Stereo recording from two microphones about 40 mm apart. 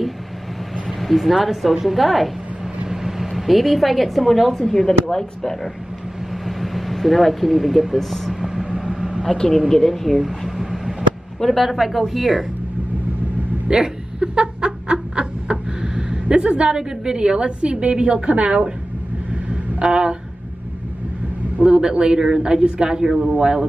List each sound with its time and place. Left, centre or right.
0.8 s speech: centre
2.9 s speech: centre
8.4 s vehicle: centre
9.7 s a sound: centre
11.5 s speech: centre
13.7 s snicker: centre
16.7 s a man's voice: centre
19.5 s vehicle: right
21.6 s a man's voice: right